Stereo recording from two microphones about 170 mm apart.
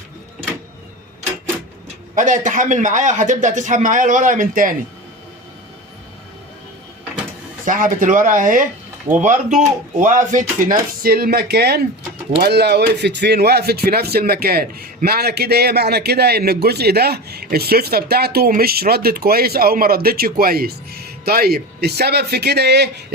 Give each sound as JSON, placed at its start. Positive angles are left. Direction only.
{"t": 2.1, "sound": "a man's voice", "side_deg": -50}
{"t": 7.6, "sound": "a man's voice", "side_deg": -50}